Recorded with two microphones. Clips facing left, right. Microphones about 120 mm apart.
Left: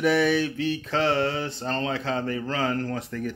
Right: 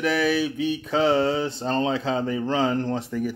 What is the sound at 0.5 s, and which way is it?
Speech, 15° right (ahead or behind).